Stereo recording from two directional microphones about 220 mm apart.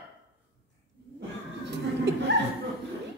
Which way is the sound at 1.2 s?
50° right (ahead or behind).